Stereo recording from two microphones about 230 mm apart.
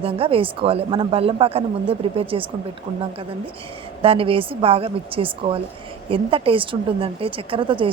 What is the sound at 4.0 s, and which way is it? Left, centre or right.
Speech, right.